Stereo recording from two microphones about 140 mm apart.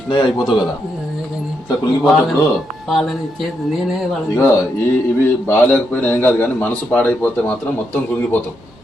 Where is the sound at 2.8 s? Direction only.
Centre (ahead or behind).